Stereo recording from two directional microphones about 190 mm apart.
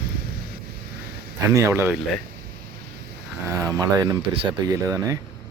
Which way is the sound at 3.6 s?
20° right (ahead or behind).